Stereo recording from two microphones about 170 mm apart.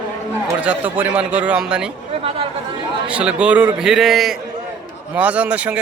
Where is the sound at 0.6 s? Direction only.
10° right (ahead or behind).